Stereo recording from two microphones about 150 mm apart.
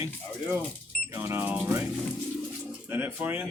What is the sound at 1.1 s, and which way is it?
Music, 15° right (ahead or behind).